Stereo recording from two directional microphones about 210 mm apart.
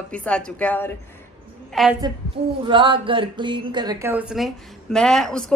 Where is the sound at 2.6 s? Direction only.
25° right (ahead or behind).